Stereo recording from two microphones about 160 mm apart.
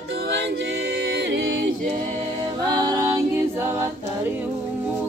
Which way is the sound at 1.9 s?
50° right (ahead or behind).